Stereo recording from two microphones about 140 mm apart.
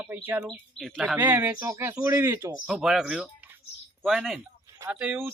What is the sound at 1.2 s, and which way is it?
Speech, 15° right (ahead or behind).